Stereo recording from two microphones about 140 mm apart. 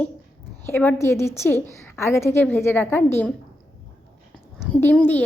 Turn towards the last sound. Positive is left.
turn(degrees=10)  # may be behind; listen again after turning